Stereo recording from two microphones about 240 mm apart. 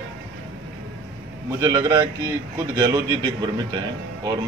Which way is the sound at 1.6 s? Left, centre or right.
Centre.